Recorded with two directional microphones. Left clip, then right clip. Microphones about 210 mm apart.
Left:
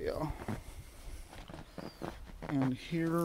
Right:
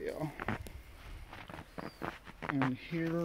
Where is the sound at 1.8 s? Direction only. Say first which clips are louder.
Right 2 dB; 10° left (ahead or behind).